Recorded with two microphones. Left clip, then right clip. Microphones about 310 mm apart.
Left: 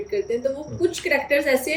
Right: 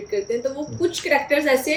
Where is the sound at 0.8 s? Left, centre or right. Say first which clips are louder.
Right 2 dB; centre.